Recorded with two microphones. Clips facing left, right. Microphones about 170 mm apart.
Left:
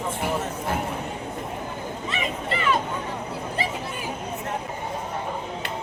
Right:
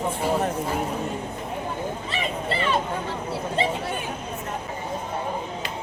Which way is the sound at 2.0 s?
30° right (ahead or behind).